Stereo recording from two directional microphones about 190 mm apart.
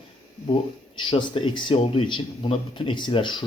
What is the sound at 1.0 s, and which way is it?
A man's voice, 25° left (ahead or behind).